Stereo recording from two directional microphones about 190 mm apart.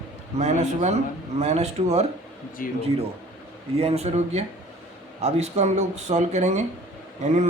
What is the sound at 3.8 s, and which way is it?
Speech, 35° right (ahead or behind).